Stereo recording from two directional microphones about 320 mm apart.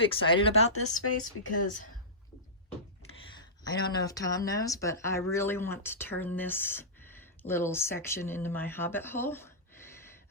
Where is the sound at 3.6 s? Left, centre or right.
Centre.